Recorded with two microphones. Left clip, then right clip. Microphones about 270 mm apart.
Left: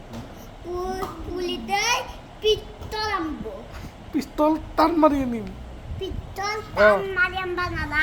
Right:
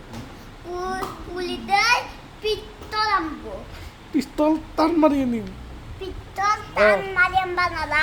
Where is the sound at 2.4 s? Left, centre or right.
Centre.